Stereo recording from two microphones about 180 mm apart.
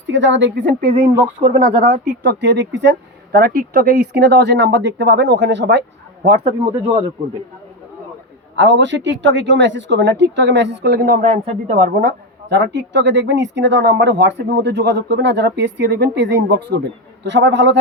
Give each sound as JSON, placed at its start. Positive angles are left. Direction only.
{"t": 0.1, "sound": "speech", "side_deg": -85}
{"t": 1.1, "sound": "speech", "side_deg": -25}
{"t": 2.0, "sound": "speech", "side_deg": -65}
{"t": 3.3, "sound": "speech", "side_deg": -55}
{"t": 6.4, "sound": "speech", "side_deg": -30}
{"t": 8.5, "sound": "a woman's voice", "side_deg": -85}
{"t": 12.5, "sound": "speech", "side_deg": -70}
{"t": 17.2, "sound": "speech", "side_deg": -80}